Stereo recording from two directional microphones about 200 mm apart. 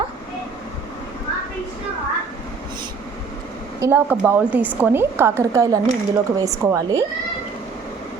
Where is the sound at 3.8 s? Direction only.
10° right (ahead or behind).